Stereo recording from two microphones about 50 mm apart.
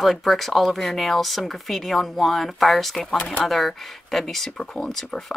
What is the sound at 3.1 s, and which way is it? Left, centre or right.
Speech, left.